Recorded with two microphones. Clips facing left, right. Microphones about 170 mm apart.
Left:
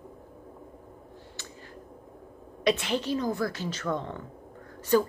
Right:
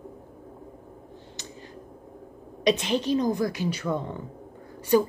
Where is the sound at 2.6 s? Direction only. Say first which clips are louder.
Right 3 dB; 20° right (ahead or behind).